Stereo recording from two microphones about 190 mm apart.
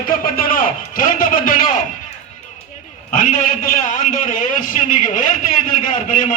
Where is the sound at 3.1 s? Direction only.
45° left (ahead or behind).